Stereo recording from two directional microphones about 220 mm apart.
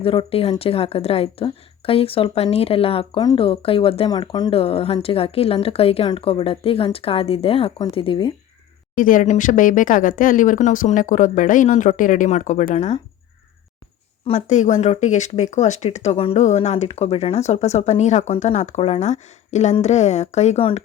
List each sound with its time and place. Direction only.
0.0 s speech: 25° left (ahead or behind)
9.0 s speech: 35° left (ahead or behind)
14.3 s speech: 30° left (ahead or behind)